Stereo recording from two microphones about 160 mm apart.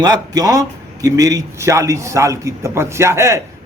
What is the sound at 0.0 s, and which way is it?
A man's voice, 25° right (ahead or behind).